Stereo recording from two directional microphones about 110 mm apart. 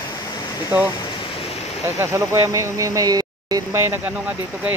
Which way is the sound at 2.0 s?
25° right (ahead or behind).